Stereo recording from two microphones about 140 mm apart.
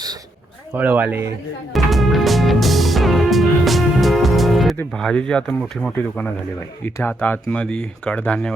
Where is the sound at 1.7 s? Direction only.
Centre (ahead or behind).